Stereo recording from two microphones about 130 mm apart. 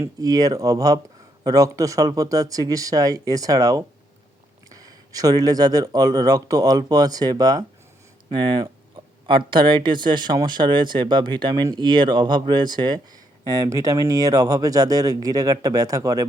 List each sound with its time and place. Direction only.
0.0 s speech: 30° right (ahead or behind)